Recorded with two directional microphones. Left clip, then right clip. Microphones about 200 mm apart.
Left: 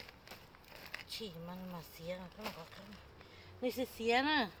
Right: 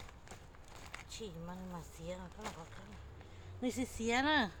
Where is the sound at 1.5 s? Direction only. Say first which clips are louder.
Even; 20° right (ahead or behind).